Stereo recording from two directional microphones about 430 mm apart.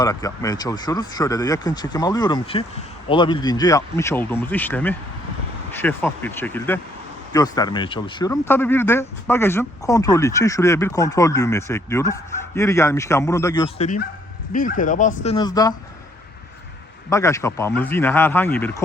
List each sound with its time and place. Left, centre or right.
0.0 s speech: centre
17.1 s speech: centre